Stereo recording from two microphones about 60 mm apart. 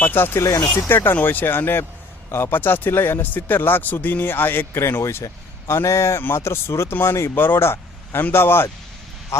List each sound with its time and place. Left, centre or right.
0.0 s speech: left
7.3 s speech: left
9.3 s speech: left